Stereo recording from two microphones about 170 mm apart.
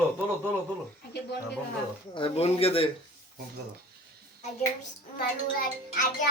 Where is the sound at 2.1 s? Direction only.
35° left (ahead or behind).